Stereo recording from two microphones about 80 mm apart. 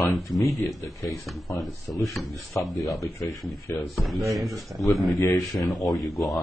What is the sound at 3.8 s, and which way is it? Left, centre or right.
Speech, centre.